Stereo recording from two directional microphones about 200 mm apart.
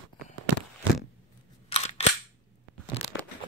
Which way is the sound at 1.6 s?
30° left (ahead or behind).